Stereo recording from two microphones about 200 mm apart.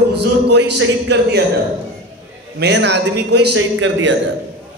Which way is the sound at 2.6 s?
55° right (ahead or behind).